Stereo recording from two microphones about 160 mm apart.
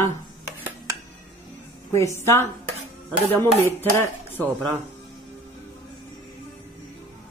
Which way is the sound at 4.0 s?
10° left (ahead or behind).